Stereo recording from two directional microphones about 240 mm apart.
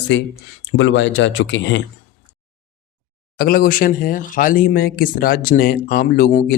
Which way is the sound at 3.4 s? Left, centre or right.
Left.